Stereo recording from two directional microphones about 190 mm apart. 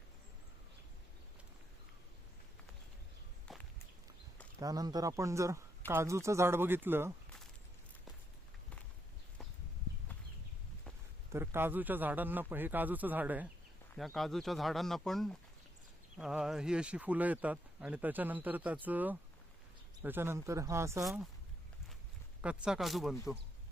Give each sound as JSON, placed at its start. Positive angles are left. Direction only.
{"t": 3.5, "sound": "walk", "side_deg": 0}
{"t": 4.6, "sound": "speech", "side_deg": -20}
{"t": 11.3, "sound": "speech", "side_deg": -10}
{"t": 13.9, "sound": "speech", "side_deg": 0}
{"t": 21.0, "sound": "speech", "side_deg": 0}
{"t": 22.4, "sound": "speech", "side_deg": -5}